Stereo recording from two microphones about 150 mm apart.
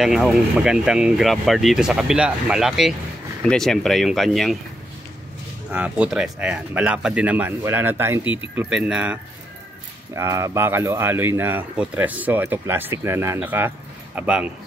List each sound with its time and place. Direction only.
0.0 s speech: 5° right (ahead or behind)
5.7 s speech: 10° right (ahead or behind)
10.1 s speech: 20° right (ahead or behind)